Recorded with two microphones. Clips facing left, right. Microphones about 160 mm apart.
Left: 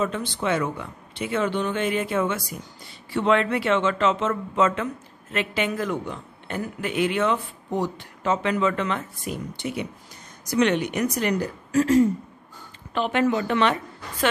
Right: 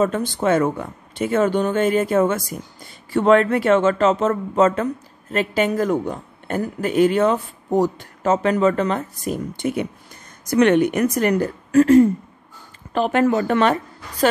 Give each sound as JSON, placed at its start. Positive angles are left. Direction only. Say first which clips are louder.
{"t": 0.0, "sound": "a woman's voice", "louder": "right 6 dB", "side_deg": -45}
{"t": 12.9, "sound": "speech", "louder": "right 5 dB", "side_deg": -40}